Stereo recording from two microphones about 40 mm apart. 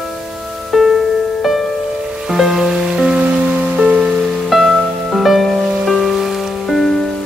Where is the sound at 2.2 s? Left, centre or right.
Centre.